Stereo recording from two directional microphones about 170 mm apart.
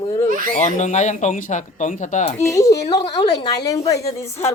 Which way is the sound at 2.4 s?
20° left (ahead or behind).